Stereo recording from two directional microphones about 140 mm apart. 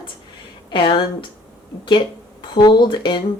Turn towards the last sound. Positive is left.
turn(degrees=35)  # may be behind; listen again after turning